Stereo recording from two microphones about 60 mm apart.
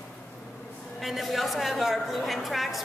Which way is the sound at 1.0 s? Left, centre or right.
Centre.